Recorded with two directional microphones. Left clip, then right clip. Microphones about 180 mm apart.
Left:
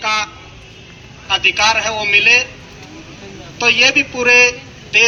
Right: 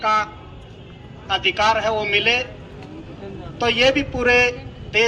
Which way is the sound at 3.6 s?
30° right (ahead or behind).